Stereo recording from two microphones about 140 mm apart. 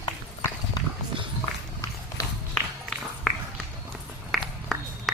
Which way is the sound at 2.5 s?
5° left (ahead or behind).